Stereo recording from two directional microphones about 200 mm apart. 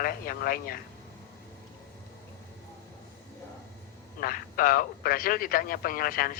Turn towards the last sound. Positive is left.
turn(degrees=45)  # may be behind; listen again after turning